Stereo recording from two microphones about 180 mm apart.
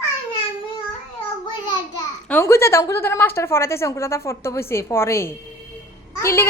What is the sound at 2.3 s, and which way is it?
A woman's voice, 15° left (ahead or behind).